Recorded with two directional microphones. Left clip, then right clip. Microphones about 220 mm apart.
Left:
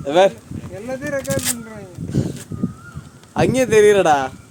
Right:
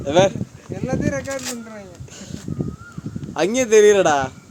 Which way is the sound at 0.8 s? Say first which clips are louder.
Even; 50° right (ahead or behind).